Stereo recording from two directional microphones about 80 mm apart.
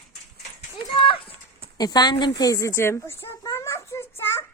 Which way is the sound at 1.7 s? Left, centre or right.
Left.